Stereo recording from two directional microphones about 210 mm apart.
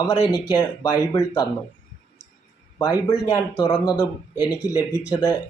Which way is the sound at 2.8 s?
15° left (ahead or behind).